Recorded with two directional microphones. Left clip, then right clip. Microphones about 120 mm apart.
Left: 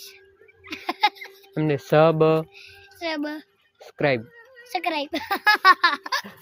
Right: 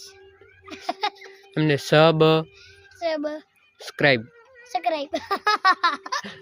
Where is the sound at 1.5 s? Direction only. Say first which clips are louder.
Right 1 dB; 60° right (ahead or behind).